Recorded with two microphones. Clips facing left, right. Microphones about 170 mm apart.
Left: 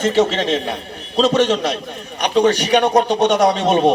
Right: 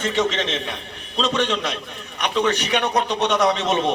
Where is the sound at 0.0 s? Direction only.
35° left (ahead or behind).